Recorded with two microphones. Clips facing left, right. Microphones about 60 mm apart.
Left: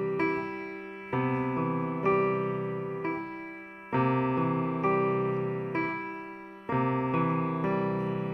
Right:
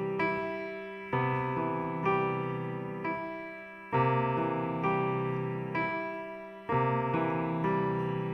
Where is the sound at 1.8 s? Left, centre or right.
Left.